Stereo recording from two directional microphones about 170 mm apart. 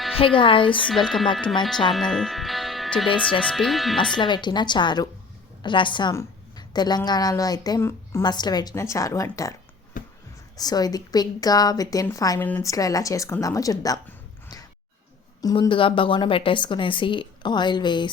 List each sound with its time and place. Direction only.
0.2 s speech: 30° left (ahead or behind)
0.9 s speech: centre (ahead or behind)
4.1 s speech: 25° left (ahead or behind)
10.0 s a sound: 55° left (ahead or behind)
10.6 s speech: 20° left (ahead or behind)
14.4 s a sound: 20° left (ahead or behind)
15.4 s speech: 20° left (ahead or behind)